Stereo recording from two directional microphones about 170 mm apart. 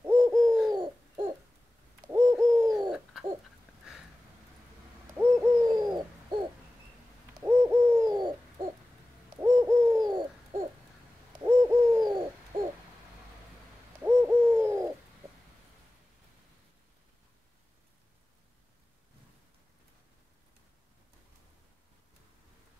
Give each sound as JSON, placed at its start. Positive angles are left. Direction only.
{"t": 0.0, "sound": "bird", "side_deg": -15}
{"t": 2.0, "sound": "bird", "side_deg": -15}
{"t": 2.9, "sound": "bird", "side_deg": -5}
{"t": 5.1, "sound": "hoot", "side_deg": -15}
{"t": 7.4, "sound": "bird", "side_deg": -20}
{"t": 9.4, "sound": "bird", "side_deg": -20}
{"t": 11.4, "sound": "hoot", "side_deg": -20}
{"t": 14.0, "sound": "bird", "side_deg": -15}